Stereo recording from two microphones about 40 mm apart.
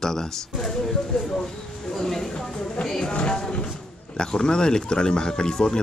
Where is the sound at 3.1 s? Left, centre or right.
Left.